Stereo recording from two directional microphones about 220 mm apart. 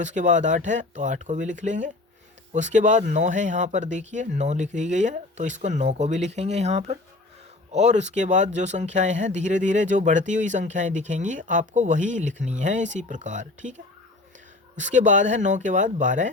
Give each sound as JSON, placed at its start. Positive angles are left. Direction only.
{"t": 0.0, "sound": "speech", "side_deg": -35}